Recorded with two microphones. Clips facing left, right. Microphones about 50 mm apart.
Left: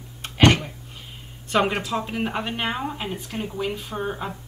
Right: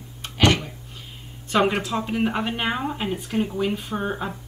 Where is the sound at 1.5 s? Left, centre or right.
Centre.